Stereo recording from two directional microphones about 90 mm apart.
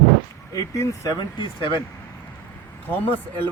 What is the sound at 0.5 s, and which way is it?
Speech, 40° left (ahead or behind).